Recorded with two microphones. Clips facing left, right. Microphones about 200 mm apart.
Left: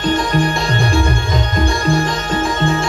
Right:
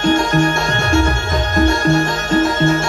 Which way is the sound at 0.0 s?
45° right (ahead or behind).